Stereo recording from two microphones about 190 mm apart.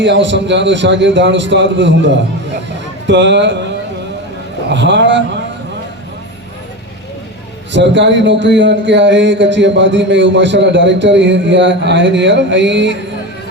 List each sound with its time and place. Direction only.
0.0 s speech: 70° right (ahead or behind)
3.1 s speech: 70° right (ahead or behind)
4.7 s speech: 70° right (ahead or behind)
7.7 s speech: 70° right (ahead or behind)